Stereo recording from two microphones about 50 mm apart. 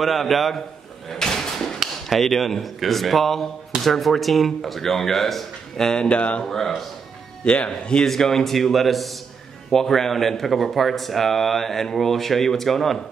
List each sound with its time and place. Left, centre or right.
0.0 s speech: centre
1.0 s drawer open or close: centre
2.0 s speech: centre; by 6.4 s left
6.4 s a man's voice: centre
7.4 s speech: left
8.0 s speech: centre